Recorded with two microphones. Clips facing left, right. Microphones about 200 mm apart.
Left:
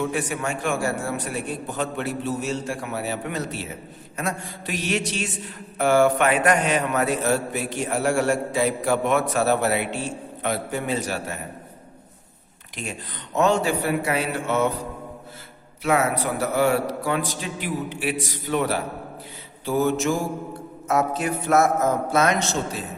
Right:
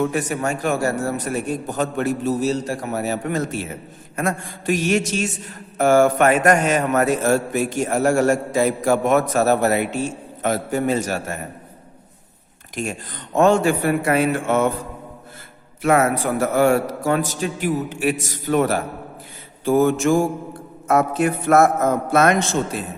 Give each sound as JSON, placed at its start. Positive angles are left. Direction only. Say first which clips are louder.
{"t": 0.0, "sound": "mantra", "louder": "right 4 dB", "side_deg": -45}
{"t": 12.7, "sound": "mantra", "louder": "right 6 dB", "side_deg": -45}
{"t": 15.8, "sound": "mantra", "louder": "right 4 dB", "side_deg": -50}
{"t": 20.8, "sound": "a man's voice", "louder": "right 5 dB", "side_deg": -55}